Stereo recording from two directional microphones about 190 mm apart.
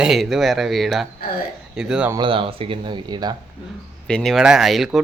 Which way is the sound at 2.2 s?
25° right (ahead or behind).